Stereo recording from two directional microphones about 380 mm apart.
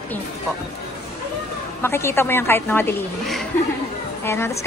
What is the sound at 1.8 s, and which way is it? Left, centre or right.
A woman's voice, centre.